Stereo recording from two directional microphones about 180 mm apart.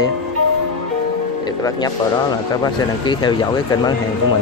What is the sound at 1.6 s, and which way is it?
Speech, 20° left (ahead or behind).